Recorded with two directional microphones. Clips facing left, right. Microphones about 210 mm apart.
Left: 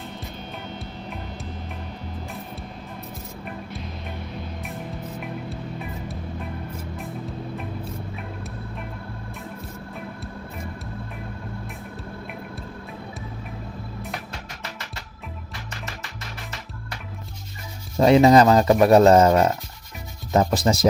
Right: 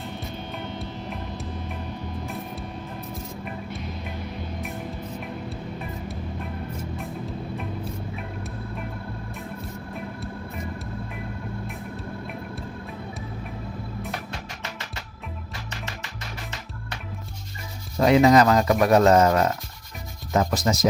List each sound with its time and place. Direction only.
18.0 s speech: 30° left (ahead or behind)